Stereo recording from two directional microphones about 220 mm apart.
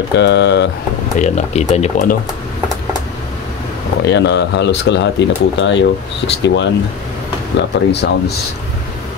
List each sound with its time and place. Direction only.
0.1 s speech: 50° left (ahead or behind)
1.2 s speech: 30° left (ahead or behind)
4.0 s speech: 50° left (ahead or behind)